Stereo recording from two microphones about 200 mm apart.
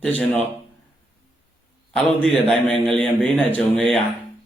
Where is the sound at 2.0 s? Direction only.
5° left (ahead or behind).